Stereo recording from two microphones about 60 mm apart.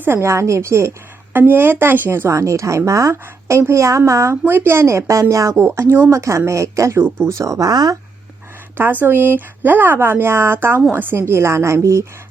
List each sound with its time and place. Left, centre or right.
0.2 s speech: right
1.3 s speech: right
2.4 s speech: right
4.4 s speech: right
4.9 s speech: right
5.5 s speech: right
8.8 s speech: right